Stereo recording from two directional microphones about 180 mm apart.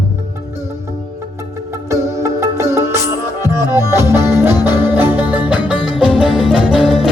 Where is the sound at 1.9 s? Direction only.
15° right (ahead or behind).